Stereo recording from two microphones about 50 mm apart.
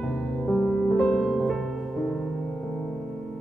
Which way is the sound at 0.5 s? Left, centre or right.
Centre.